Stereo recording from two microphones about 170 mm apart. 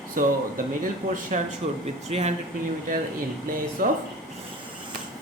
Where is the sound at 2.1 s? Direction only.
40° right (ahead or behind).